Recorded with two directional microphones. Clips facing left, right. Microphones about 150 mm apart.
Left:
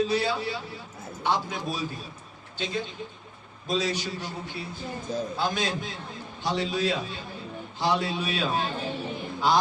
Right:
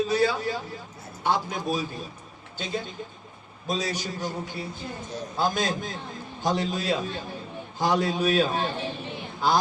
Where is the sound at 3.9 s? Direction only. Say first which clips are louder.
Right 2 dB; 45° right (ahead or behind).